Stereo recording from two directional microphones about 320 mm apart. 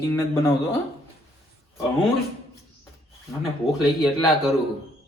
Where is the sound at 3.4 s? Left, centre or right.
Centre.